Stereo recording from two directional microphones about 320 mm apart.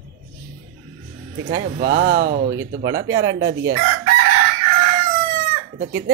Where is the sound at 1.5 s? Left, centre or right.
Right.